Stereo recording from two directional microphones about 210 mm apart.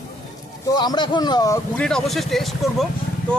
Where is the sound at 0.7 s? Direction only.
20° left (ahead or behind).